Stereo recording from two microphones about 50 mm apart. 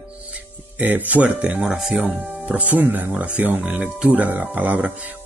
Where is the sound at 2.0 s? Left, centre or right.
Right.